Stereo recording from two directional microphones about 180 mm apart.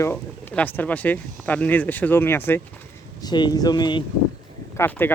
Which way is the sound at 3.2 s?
25° left (ahead or behind).